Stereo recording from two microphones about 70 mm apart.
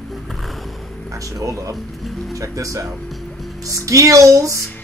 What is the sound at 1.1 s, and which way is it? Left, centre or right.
Speech, right.